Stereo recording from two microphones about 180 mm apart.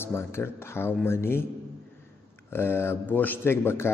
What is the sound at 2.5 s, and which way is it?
Speech, 15° left (ahead or behind).